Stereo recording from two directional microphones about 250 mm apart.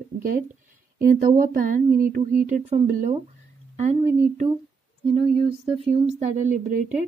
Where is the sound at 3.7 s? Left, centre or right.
Right.